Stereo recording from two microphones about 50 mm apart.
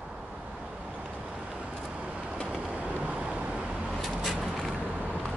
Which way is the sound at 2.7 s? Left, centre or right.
Right.